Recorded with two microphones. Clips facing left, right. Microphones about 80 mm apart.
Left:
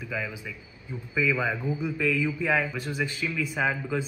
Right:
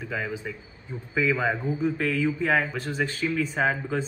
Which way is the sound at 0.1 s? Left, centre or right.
Right.